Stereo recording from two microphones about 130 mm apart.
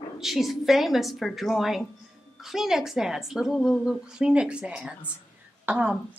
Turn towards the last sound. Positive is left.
turn(degrees=-10)  # may be behind; listen again after turning